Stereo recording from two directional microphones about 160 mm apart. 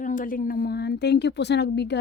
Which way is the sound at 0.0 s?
55° left (ahead or behind).